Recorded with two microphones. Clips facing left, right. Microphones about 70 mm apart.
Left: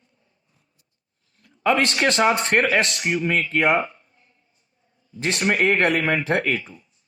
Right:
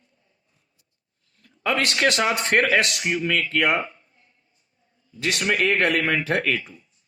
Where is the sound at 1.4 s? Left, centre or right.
Left.